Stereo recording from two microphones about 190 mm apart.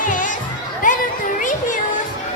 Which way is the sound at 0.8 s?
45° left (ahead or behind).